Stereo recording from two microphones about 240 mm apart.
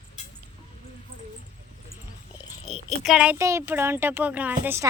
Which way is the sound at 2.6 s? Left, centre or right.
Left.